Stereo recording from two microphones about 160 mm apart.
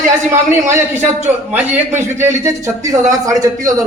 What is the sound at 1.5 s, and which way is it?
A man's voice, 10° right (ahead or behind).